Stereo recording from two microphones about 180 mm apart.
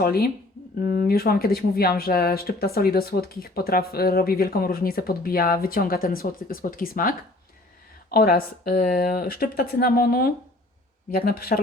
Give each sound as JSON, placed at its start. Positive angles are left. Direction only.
{"t": 0.0, "sound": "speech", "side_deg": 55}
{"t": 8.1, "sound": "speech", "side_deg": 55}